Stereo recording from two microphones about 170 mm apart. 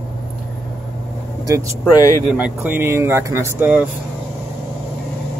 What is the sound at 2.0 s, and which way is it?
Speech, 20° left (ahead or behind).